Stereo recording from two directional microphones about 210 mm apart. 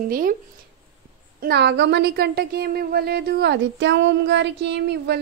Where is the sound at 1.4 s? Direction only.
55° right (ahead or behind).